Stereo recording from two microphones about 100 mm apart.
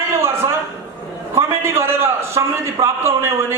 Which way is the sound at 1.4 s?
25° right (ahead or behind).